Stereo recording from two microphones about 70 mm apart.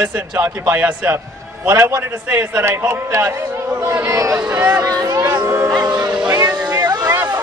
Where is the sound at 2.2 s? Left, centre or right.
Right.